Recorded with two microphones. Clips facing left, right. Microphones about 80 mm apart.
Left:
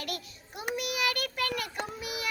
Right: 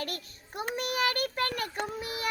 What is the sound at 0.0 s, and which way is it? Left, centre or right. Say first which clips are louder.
Child singing: right 1 dB; right.